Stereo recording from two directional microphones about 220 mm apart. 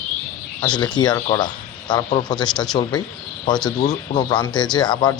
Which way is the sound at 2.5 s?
Centre (ahead or behind).